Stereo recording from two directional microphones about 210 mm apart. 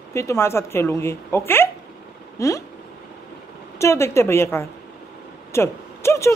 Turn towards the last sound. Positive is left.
turn(degrees=15)  # may be behind; listen again after turning